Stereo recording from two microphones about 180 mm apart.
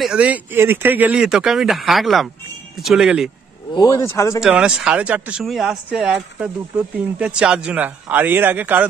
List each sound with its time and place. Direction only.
0.0 s speech: 5° right (ahead or behind)
3.7 s speech: 20° left (ahead or behind)
4.4 s speech: 5° right (ahead or behind)